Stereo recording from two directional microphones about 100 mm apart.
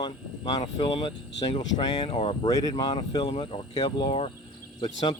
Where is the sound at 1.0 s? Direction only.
55° left (ahead or behind).